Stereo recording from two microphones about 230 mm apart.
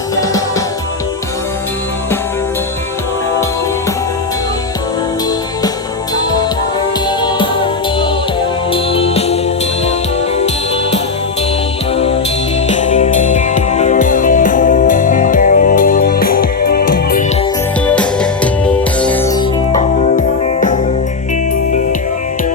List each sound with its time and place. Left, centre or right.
7.2 s music: left
8.7 s music: left
11.9 s music: left
17.8 s music: centre
19.7 s music: left